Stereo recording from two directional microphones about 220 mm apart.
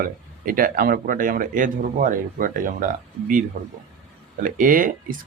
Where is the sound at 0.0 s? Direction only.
40° right (ahead or behind).